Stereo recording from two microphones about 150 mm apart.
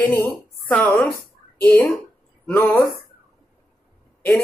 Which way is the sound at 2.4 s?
15° left (ahead or behind).